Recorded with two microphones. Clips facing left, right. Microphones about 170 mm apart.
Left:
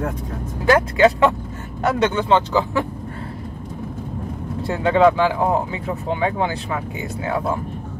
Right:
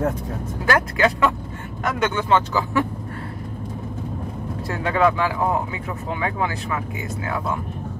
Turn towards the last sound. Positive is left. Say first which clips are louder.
# left 3 dB
turn(degrees=25)  # may be behind; listen again after turning